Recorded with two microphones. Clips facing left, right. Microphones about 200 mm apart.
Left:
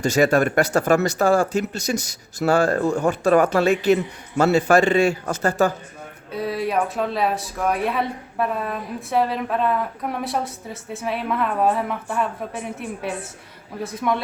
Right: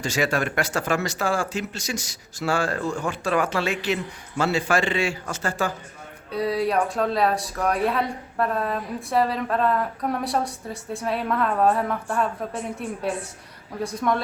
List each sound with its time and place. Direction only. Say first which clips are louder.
0.2 s a man's voice: left 7 dB; 45° left (ahead or behind)
6.3 s a woman's voice: right 1 dB; centre (ahead or behind)